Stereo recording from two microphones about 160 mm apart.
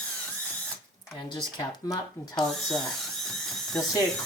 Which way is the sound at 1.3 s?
25° left (ahead or behind).